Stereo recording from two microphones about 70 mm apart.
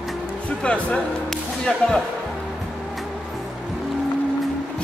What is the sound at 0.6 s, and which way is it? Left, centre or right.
Speech, centre.